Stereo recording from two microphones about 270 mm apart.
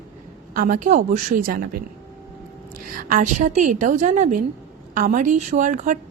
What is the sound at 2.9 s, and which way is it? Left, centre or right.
A woman's voice, right.